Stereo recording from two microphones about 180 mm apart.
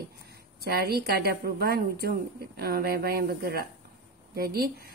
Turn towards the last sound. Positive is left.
turn(degrees=-55)  # may be behind; listen again after turning